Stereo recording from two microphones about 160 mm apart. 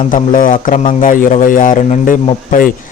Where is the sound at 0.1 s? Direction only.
55° left (ahead or behind).